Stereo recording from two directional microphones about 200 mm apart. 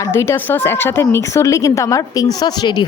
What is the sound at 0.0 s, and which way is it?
A woman's voice, 15° left (ahead or behind).